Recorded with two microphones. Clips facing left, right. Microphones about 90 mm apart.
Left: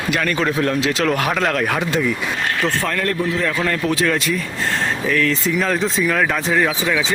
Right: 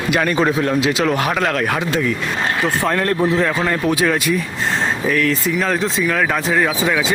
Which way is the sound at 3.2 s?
25° right (ahead or behind).